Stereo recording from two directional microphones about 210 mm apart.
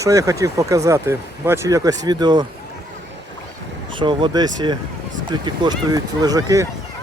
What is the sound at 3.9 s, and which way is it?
Speech, 25° right (ahead or behind).